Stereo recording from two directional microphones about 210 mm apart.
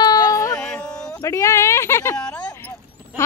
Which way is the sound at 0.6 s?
5° left (ahead or behind).